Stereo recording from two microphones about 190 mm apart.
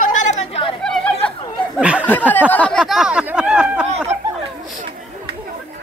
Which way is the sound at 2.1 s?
10° left (ahead or behind).